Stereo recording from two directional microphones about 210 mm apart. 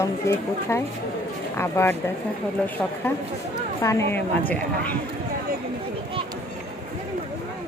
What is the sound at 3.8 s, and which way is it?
Speech, 15° left (ahead or behind).